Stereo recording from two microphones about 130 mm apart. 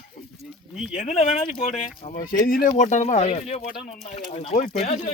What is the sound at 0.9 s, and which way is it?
Speech, 65° left (ahead or behind).